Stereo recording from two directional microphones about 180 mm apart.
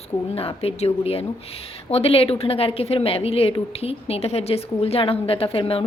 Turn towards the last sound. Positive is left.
turn(degrees=30)  # may be behind; listen again after turning